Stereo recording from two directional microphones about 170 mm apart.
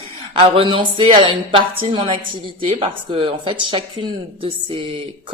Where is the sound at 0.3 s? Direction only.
30° right (ahead or behind).